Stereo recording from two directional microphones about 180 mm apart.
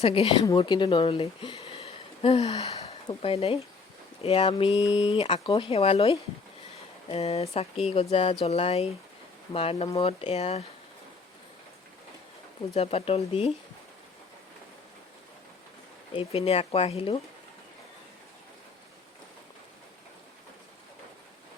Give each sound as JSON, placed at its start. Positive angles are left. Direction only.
{"t": 0.0, "sound": "speech", "side_deg": 35}
{"t": 12.7, "sound": "speech", "side_deg": 35}
{"t": 16.1, "sound": "speech", "side_deg": 35}